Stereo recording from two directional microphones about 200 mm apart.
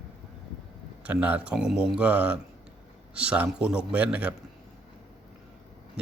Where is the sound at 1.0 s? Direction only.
5° right (ahead or behind).